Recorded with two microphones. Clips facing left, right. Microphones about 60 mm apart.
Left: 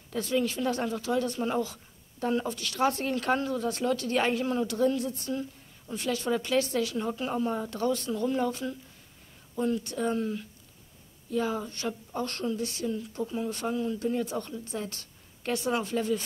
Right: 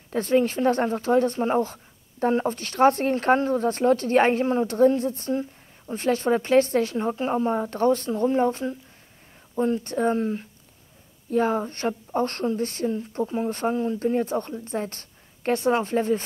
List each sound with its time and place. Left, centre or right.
0.1 s speech: right